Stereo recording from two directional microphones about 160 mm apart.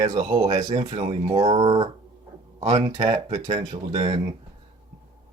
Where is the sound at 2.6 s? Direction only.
45° right (ahead or behind).